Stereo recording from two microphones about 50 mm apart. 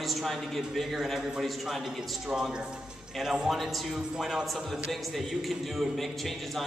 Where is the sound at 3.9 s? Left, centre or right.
Centre.